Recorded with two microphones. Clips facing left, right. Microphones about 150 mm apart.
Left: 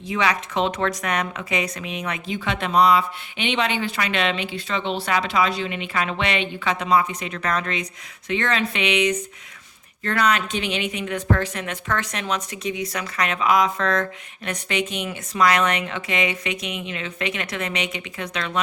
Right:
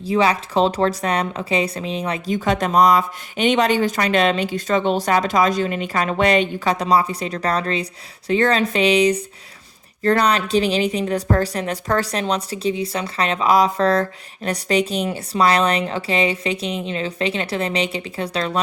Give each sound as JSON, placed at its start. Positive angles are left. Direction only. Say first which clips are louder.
{"t": 0.0, "sound": "a woman's voice", "louder": "right 5 dB", "side_deg": -30}